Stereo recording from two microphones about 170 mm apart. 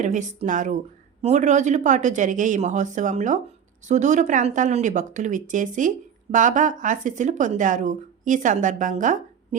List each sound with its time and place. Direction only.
0.0 s speech: 45° right (ahead or behind)